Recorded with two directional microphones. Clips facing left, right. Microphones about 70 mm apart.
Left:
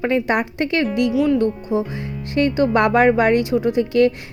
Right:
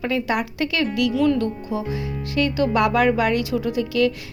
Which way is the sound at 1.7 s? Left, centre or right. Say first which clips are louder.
Left 4 dB; left.